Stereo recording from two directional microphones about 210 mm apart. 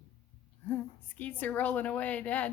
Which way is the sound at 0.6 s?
5° left (ahead or behind).